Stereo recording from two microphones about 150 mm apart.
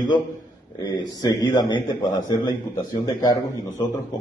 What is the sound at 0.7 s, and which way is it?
A man's voice, 30° left (ahead or behind).